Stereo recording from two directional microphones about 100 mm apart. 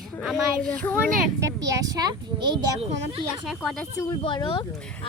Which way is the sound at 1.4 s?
35° right (ahead or behind).